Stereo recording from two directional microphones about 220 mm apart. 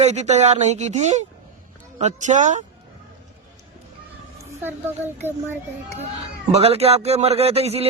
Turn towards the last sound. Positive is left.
turn(degrees=-25)  # may be behind; listen again after turning